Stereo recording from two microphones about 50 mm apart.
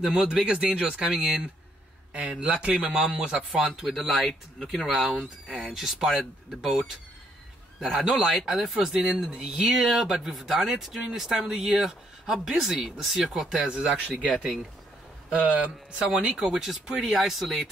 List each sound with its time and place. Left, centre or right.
0.0 s speech: centre
2.4 s speech: right
3.3 s speech: centre
3.8 s speech: centre
5.7 s speech: centre
7.8 s speech: centre
13.6 s speech: right
14.2 s speech: centre
15.2 s speech: right
16.3 s speech: centre